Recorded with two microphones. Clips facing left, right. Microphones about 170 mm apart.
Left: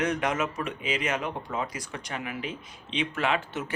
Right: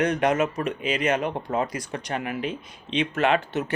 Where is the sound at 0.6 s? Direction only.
65° right (ahead or behind).